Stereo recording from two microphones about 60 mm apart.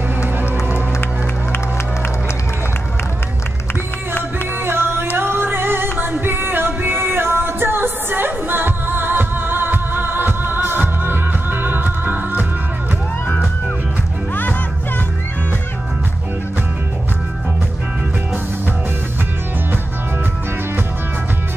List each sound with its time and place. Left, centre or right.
4.6 s music: right